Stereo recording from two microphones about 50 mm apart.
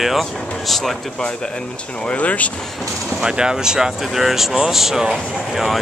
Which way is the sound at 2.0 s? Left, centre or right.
Left.